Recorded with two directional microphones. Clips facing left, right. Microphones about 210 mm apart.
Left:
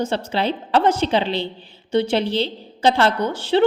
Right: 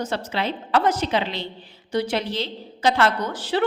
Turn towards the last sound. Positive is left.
turn(degrees=25)  # may be behind; listen again after turning